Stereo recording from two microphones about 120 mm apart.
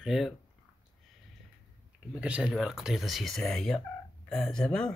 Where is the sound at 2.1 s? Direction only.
10° right (ahead or behind); by 4.9 s 5° left (ahead or behind).